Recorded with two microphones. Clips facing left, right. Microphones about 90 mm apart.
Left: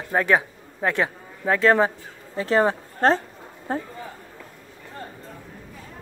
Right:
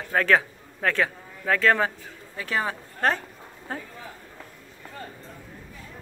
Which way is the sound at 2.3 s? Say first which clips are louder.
Left 8 dB; 35° left (ahead or behind).